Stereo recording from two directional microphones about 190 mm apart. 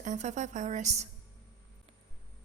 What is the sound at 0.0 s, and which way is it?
A woman's voice, 40° right (ahead or behind).